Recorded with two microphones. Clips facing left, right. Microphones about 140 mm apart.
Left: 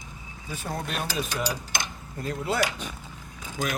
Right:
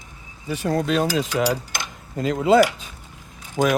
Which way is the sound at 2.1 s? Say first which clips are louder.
Right 11 dB; 90° right.